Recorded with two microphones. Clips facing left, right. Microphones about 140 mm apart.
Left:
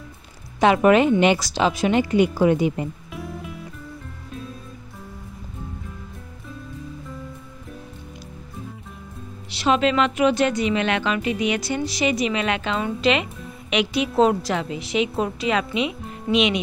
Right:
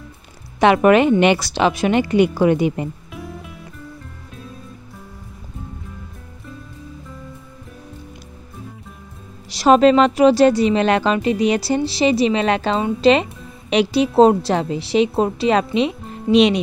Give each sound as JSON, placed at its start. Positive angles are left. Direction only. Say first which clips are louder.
{"t": 0.6, "sound": "a woman's voice", "louder": "right 3 dB", "side_deg": -65}
{"t": 3.1, "sound": "music", "louder": "even", "side_deg": 0}
{"t": 9.5, "sound": "a woman's voice", "louder": "right 8 dB", "side_deg": -40}